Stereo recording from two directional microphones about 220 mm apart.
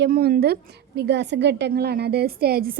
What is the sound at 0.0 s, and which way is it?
A woman's voice, 45° right (ahead or behind).